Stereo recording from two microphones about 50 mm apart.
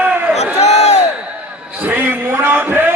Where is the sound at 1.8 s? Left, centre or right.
Right.